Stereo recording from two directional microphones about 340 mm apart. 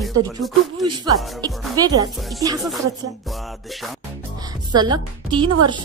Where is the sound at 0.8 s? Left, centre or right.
Centre.